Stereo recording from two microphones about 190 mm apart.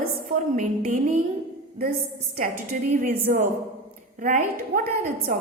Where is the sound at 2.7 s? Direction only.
50° right (ahead or behind).